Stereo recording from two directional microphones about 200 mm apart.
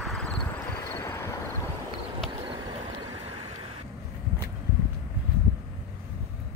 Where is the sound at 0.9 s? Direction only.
10° left (ahead or behind).